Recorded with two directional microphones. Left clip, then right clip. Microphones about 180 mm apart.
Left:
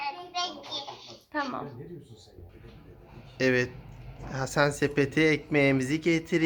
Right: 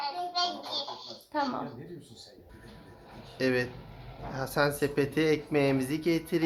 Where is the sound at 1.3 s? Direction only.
Centre (ahead or behind).